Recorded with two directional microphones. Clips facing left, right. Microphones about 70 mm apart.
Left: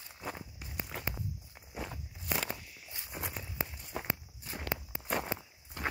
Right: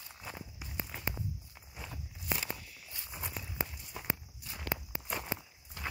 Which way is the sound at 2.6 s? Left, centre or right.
Left.